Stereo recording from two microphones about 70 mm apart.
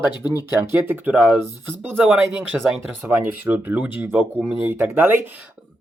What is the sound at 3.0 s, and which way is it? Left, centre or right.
Speech, right.